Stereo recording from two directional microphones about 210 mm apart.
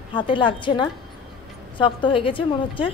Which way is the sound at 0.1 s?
25° left (ahead or behind).